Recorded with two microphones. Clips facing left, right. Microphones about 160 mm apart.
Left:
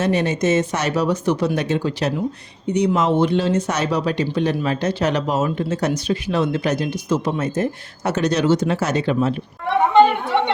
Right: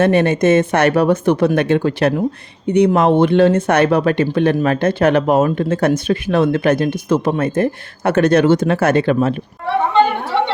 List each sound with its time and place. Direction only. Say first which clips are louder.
0.0 s speech: right 6 dB; 55° right (ahead or behind)